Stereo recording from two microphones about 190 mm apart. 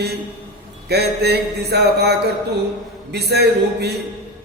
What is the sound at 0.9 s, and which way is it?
Mantra, 60° right (ahead or behind).